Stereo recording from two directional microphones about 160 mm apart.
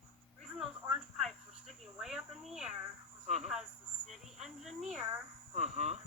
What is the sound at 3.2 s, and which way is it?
Cricket, 45° right (ahead or behind).